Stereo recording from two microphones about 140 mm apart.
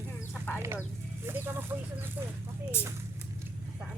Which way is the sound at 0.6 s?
15° right (ahead or behind).